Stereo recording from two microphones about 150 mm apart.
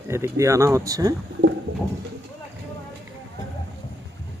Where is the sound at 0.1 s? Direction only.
20° right (ahead or behind).